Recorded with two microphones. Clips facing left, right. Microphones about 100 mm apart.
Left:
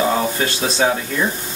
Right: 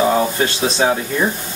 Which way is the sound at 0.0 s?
5° right (ahead or behind).